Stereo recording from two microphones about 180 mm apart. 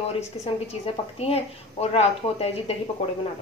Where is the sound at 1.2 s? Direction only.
35° left (ahead or behind).